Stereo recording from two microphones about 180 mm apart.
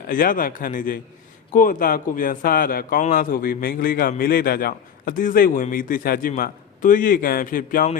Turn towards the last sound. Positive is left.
turn(degrees=50)  # may be behind; listen again after turning